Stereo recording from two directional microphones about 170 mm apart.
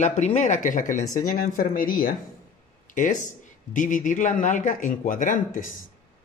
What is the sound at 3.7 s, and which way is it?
A woman's voice, 50° left (ahead or behind).